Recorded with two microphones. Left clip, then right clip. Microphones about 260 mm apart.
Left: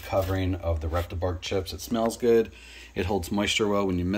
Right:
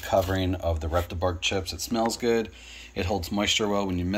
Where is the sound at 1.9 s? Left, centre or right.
Centre.